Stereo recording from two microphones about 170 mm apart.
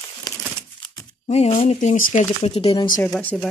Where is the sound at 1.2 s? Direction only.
40° left (ahead or behind).